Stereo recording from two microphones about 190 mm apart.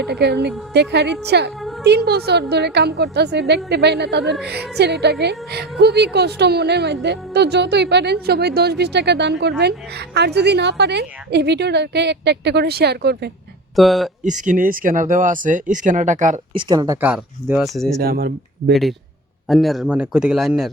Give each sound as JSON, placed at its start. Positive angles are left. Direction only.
{"t": 0.1, "sound": "speech", "side_deg": -60}
{"t": 13.7, "sound": "speech", "side_deg": 0}
{"t": 14.3, "sound": "speech", "side_deg": -40}
{"t": 16.6, "sound": "speech", "side_deg": -20}
{"t": 18.0, "sound": "speech", "side_deg": -55}
{"t": 18.7, "sound": "speech", "side_deg": 0}